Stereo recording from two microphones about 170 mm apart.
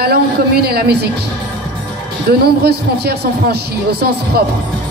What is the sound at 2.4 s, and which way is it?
A woman's voice, 70° right (ahead or behind).